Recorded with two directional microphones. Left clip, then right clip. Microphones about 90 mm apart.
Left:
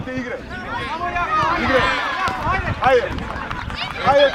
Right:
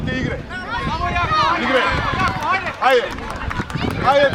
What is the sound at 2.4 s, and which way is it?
Run, 35° right (ahead or behind).